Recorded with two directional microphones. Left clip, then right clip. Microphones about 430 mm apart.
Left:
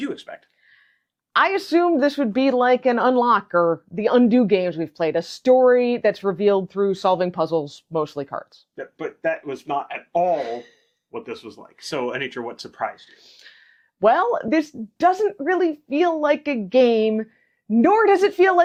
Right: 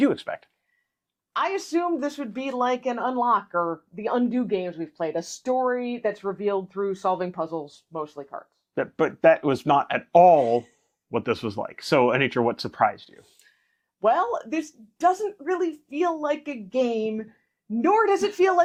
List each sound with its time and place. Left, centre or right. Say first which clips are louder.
0.0 s speech: right 7 dB; right
1.4 s a woman's voice: left 7 dB; left
8.7 s speech: right 7 dB; right
14.0 s speech: left 5 dB; left